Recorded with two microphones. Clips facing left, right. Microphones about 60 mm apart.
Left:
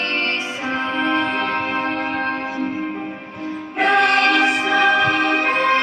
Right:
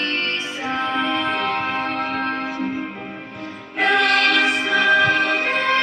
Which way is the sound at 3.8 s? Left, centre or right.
Left.